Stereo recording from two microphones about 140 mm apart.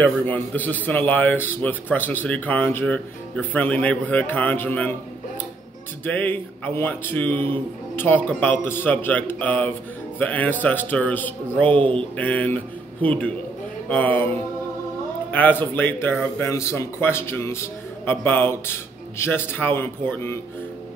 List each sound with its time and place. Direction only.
0.0 s speech: 10° left (ahead or behind)
6.0 s speech: 15° left (ahead or behind)
15.3 s speech: 15° left (ahead or behind)